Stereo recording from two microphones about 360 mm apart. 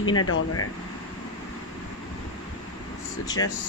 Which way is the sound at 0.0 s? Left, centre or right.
Left.